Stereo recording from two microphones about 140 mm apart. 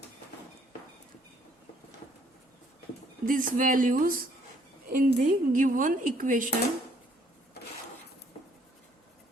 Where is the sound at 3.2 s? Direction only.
75° right (ahead or behind).